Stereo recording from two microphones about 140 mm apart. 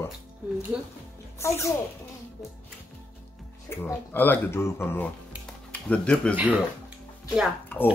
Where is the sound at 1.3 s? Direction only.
20° left (ahead or behind).